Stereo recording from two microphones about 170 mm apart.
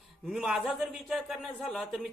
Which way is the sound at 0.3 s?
5° right (ahead or behind).